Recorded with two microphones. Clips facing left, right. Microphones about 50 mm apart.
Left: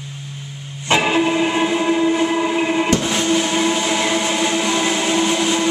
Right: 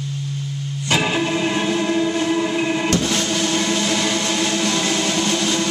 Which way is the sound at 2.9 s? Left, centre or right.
Centre.